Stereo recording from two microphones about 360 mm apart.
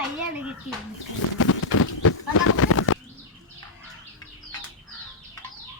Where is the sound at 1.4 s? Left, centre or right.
Left.